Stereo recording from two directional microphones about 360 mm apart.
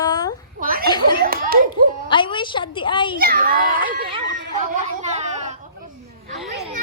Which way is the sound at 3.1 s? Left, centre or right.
Right.